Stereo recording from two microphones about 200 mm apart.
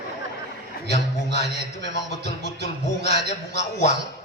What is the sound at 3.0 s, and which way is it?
Speech, 35° left (ahead or behind).